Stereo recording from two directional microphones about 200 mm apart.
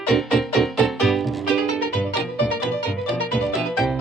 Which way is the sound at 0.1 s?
Centre (ahead or behind).